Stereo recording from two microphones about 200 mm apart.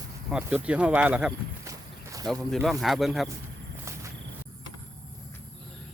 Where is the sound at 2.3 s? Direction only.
Centre (ahead or behind).